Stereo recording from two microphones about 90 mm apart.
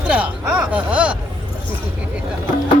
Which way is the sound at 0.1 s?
10° right (ahead or behind).